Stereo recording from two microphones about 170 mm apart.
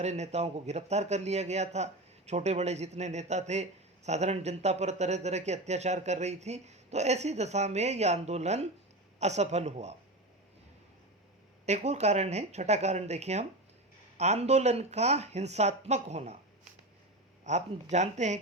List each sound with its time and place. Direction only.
0.0 s speech: 40° right (ahead or behind)
11.6 s speech: 40° right (ahead or behind)
17.5 s speech: 45° right (ahead or behind)